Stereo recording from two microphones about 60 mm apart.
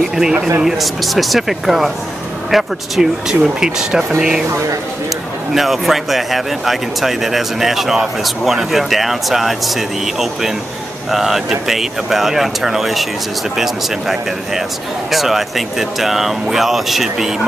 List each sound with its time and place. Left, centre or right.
0.1 s speech: centre
4.5 s speech: right
5.5 s speech: centre